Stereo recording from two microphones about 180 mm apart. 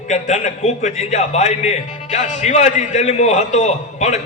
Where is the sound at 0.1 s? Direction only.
40° left (ahead or behind).